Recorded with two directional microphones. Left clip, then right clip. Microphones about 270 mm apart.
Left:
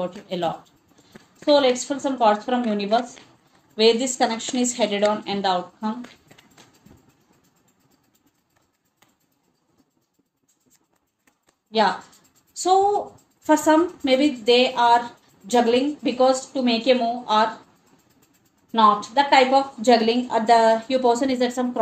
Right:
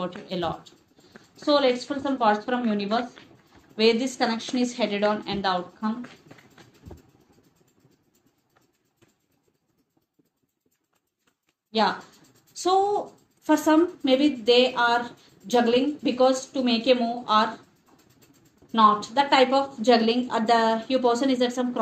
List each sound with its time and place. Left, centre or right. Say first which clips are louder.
0.0 s speech: left 4 dB; left
12.5 s speech: left 4 dB; left
18.7 s speech: left 2 dB; left